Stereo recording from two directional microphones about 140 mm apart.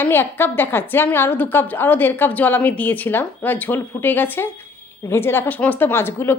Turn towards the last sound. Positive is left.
turn(degrees=15)  # may be behind; listen again after turning